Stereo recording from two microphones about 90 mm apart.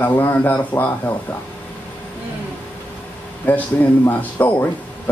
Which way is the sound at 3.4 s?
20° left (ahead or behind).